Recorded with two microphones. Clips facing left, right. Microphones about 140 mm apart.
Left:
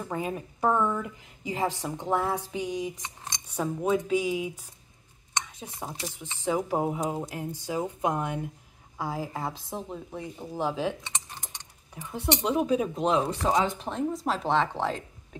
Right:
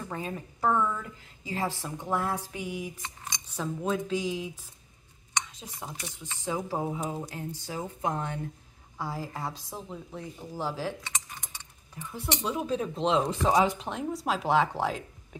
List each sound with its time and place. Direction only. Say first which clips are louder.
0.1 s speech: left 6 dB; 15° left (ahead or behind)
3.5 s speech: left 4 dB; 10° left (ahead or behind)
5.8 s speech: left 4 dB; 5° left (ahead or behind)